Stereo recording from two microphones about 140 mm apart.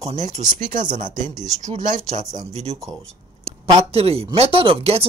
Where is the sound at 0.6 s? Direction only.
65° right (ahead or behind).